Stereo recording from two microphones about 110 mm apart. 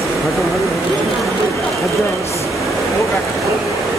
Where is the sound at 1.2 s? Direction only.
Centre (ahead or behind).